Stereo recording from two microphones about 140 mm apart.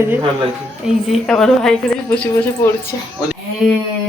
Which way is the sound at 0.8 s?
Centre (ahead or behind).